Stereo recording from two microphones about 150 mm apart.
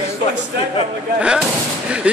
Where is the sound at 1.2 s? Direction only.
5° right (ahead or behind).